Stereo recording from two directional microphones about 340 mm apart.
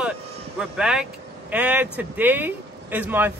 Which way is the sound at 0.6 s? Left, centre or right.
Centre.